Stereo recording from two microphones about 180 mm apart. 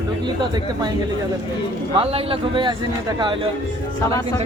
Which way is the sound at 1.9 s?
30° right (ahead or behind).